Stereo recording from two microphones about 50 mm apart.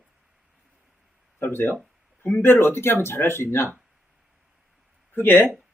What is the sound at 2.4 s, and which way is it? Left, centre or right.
Speech, left.